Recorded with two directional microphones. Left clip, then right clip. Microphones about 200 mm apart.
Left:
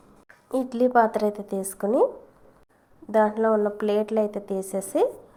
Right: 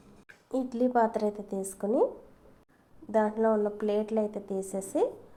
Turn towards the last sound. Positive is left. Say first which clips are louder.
# left 6 dB
turn(degrees=20)  # may be behind; listen again after turning